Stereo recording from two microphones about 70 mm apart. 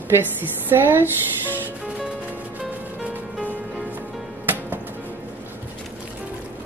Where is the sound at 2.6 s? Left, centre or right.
Centre.